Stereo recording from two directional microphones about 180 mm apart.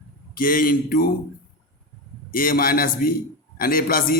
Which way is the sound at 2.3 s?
50° left (ahead or behind).